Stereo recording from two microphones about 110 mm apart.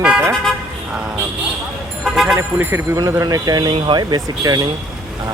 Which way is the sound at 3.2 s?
35° right (ahead or behind).